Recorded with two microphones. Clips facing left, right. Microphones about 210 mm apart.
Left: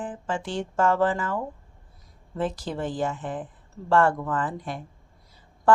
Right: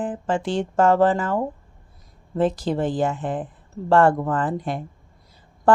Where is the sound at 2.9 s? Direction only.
75° right (ahead or behind).